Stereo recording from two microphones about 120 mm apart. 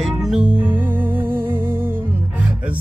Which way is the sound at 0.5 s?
15° right (ahead or behind).